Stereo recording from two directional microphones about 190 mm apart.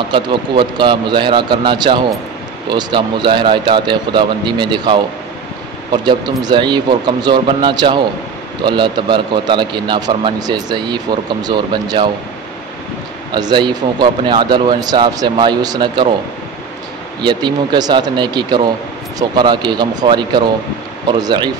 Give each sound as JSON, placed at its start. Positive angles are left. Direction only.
{"t": 0.1, "sound": "speech", "side_deg": -25}
{"t": 6.4, "sound": "speech", "side_deg": -25}
{"t": 13.3, "sound": "speech", "side_deg": -25}
{"t": 17.2, "sound": "speech", "side_deg": -25}